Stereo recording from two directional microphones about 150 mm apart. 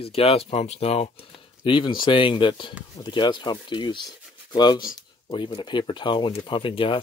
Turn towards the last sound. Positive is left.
turn(degrees=35)  # may be behind; listen again after turning